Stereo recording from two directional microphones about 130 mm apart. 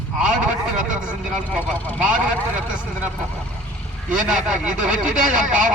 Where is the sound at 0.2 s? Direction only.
5° right (ahead or behind).